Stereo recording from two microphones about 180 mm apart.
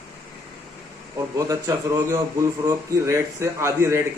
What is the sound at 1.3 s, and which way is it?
A man's voice, 20° right (ahead or behind).